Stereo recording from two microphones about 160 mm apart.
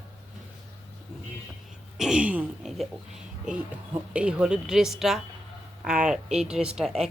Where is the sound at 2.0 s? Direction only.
5° right (ahead or behind).